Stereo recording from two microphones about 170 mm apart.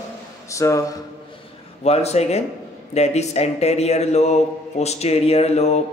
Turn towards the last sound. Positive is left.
turn(degrees=40)  # may be behind; listen again after turning